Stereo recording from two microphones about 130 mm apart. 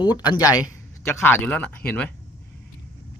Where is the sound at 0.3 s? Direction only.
30° left (ahead or behind).